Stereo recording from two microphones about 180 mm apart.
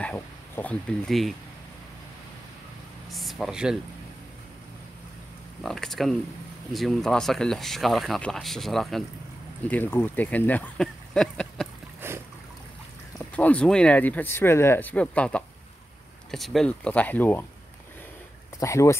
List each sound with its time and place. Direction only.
0.0 s speech: 10° left (ahead or behind)
3.1 s speech: centre (ahead or behind)
5.6 s speech: centre (ahead or behind)
12.0 s trickle: 15° right (ahead or behind)
13.4 s speech: 5° left (ahead or behind)
18.6 s speech: 15° left (ahead or behind)